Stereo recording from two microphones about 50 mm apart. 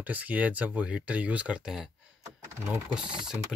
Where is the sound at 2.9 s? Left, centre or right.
Centre.